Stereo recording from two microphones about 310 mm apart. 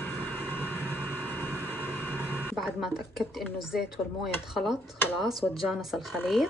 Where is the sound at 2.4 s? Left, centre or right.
Centre.